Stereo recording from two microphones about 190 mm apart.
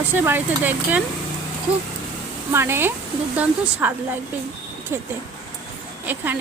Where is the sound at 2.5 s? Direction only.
10° right (ahead or behind).